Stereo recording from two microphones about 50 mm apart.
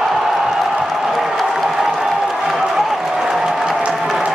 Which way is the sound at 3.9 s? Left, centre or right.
Centre.